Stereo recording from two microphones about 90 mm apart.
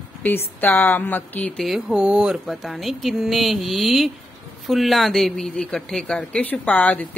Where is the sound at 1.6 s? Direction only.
5° right (ahead or behind).